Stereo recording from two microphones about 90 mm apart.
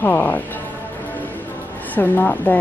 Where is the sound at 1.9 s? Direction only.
20° left (ahead or behind).